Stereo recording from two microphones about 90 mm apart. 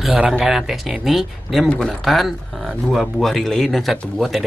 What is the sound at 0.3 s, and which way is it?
Speech, 5° right (ahead or behind).